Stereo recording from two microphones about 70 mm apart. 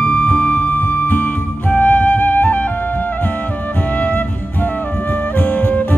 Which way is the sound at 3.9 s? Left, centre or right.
Left.